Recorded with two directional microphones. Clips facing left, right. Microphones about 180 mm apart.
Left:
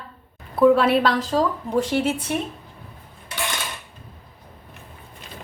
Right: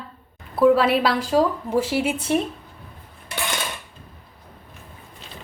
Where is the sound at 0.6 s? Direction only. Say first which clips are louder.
Left 1 dB; centre (ahead or behind).